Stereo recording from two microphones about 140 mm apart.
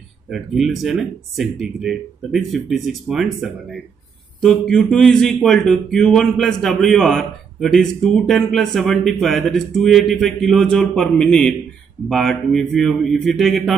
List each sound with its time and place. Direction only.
0.3 s a man's voice: centre (ahead or behind)